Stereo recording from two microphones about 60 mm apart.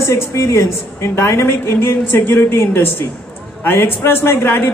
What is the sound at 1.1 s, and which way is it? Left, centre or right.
Speech, left.